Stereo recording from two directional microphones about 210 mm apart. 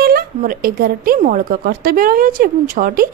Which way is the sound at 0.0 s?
45° right (ahead or behind).